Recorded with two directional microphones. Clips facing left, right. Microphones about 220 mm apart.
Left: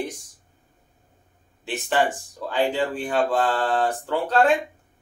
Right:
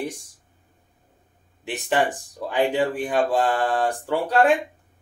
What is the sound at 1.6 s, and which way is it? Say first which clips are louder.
Speech: even; 15° right (ahead or behind).